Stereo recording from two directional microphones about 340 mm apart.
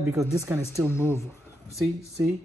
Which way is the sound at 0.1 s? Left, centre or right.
Centre.